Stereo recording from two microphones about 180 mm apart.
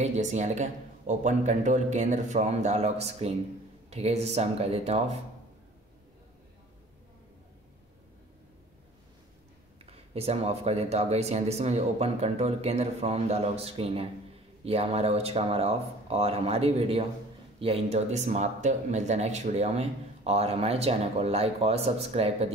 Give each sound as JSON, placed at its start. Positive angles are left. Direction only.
{"t": 0.0, "sound": "speech", "side_deg": -40}
{"t": 9.9, "sound": "speech", "side_deg": -35}